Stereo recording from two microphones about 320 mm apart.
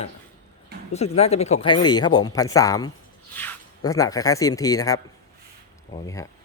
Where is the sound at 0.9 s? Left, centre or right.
Centre.